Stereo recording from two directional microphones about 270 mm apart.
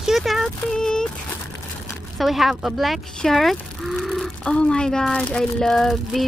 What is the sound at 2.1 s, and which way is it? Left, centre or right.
Speech, centre.